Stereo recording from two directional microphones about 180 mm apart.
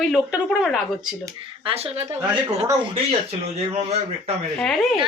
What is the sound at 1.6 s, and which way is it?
Speech, 35° right (ahead or behind).